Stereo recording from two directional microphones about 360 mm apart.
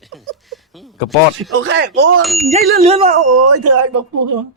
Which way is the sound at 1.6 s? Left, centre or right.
Right.